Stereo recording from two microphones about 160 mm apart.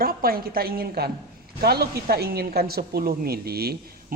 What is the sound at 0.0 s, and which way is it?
A woman's voice, 70° right (ahead or behind).